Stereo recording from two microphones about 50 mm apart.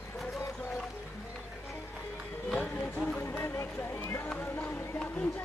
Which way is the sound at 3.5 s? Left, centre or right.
Left.